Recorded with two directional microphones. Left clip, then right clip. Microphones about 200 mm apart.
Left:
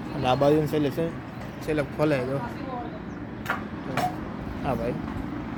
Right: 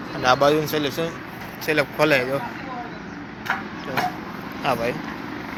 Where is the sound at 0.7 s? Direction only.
15° left (ahead or behind).